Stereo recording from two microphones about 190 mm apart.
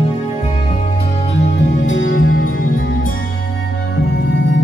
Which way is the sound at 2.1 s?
50° left (ahead or behind).